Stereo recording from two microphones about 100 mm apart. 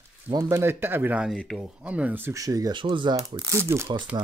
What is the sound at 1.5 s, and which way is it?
Speech, 10° right (ahead or behind).